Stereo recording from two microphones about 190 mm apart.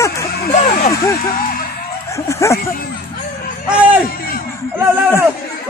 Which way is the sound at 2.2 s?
15° left (ahead or behind).